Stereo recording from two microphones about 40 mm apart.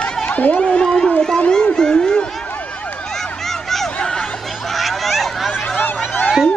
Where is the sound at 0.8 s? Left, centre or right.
Centre.